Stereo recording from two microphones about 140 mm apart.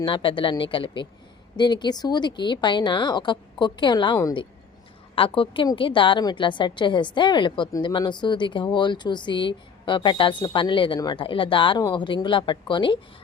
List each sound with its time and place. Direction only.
0.0 s a woman's voice: 35° left (ahead or behind)